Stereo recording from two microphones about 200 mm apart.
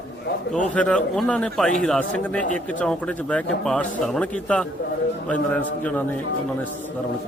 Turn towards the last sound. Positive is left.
turn(degrees=5)  # may be behind; listen again after turning